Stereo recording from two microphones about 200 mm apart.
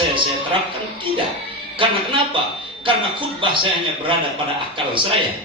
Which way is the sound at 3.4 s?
25° right (ahead or behind).